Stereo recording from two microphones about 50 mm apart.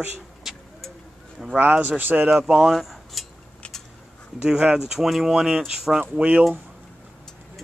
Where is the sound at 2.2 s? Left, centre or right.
Centre.